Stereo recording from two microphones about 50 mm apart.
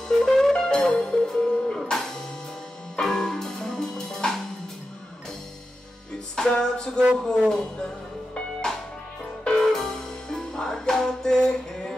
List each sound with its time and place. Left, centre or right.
0.2 s music: centre
6.3 s music: centre
7.2 s speech: centre
9.4 s music: centre